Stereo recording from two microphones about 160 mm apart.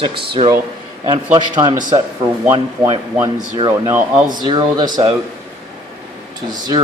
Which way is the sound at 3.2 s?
20° right (ahead or behind).